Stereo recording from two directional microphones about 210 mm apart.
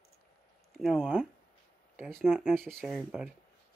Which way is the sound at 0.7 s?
5° right (ahead or behind).